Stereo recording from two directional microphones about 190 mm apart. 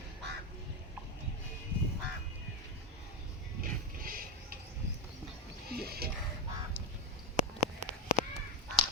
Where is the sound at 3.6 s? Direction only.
50° right (ahead or behind).